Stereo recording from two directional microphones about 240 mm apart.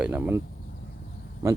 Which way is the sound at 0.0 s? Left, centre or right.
Centre.